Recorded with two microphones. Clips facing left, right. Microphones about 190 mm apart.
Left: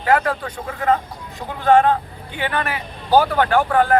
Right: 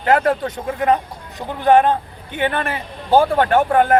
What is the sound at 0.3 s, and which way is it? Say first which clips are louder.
Speech: right 5 dB; 20° right (ahead or behind).